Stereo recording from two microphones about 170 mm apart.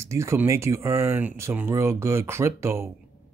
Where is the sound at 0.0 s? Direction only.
15° right (ahead or behind).